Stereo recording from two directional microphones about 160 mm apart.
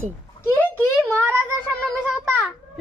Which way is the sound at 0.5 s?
10° left (ahead or behind).